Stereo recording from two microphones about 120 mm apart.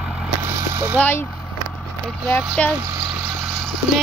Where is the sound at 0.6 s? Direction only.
20° right (ahead or behind).